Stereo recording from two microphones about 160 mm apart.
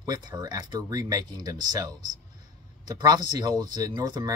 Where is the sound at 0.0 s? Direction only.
25° right (ahead or behind).